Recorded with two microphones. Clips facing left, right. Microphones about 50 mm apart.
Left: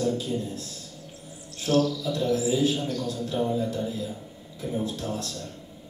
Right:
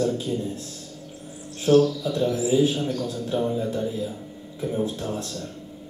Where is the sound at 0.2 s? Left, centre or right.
Right.